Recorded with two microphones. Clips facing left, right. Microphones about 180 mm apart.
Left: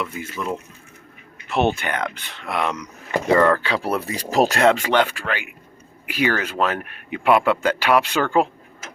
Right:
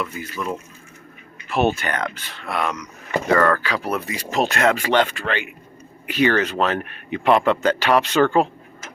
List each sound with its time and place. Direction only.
0.0 s speech: 25° left (ahead or behind)
1.5 s speech: 15° left (ahead or behind); by 4.8 s 30° left (ahead or behind)
4.8 s speech: 10° left (ahead or behind)